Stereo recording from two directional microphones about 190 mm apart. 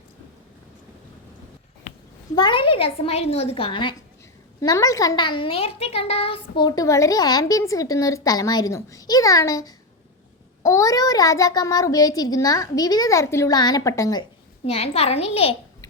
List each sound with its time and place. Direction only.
2.3 s a woman's voice: 25° left (ahead or behind)